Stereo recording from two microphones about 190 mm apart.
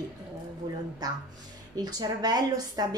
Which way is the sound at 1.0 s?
20° right (ahead or behind).